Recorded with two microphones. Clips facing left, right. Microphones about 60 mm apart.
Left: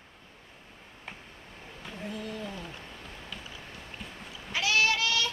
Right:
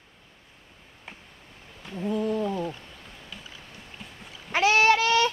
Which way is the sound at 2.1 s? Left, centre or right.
Right.